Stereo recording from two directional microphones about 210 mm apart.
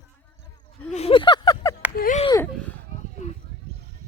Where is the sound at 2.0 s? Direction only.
40° left (ahead or behind).